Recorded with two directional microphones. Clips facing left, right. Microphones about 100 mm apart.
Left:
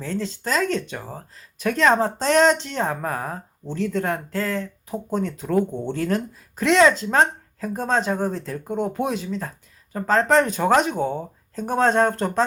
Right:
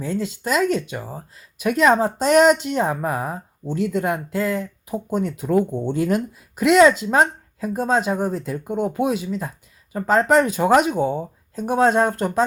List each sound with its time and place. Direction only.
0.0 s speech: 10° right (ahead or behind)